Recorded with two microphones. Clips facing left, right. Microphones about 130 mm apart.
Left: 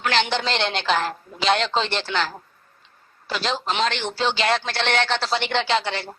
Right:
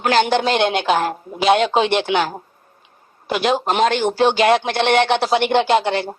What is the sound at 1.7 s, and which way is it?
Speech, 15° right (ahead or behind).